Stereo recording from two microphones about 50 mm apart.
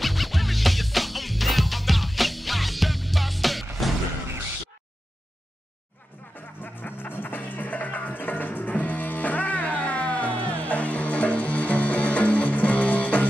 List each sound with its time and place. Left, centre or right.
0.0 s music: centre
6.6 s music: left